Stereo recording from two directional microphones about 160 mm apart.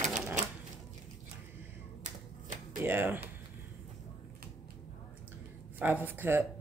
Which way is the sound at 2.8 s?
15° right (ahead or behind).